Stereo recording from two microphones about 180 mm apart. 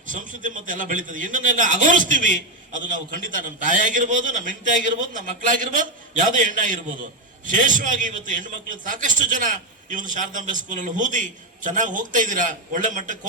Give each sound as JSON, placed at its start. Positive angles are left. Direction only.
{"t": 0.1, "sound": "a man's voice", "side_deg": -45}